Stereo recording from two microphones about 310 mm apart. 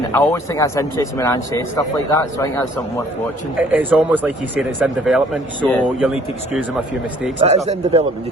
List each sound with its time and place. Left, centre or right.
0.1 s speech: centre
3.6 s speech: centre
7.3 s speech: right